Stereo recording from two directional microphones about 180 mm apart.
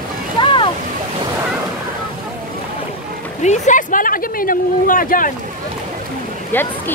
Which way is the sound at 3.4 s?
40° left (ahead or behind).